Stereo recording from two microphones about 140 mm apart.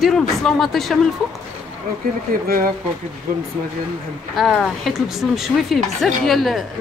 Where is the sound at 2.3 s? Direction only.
90° right.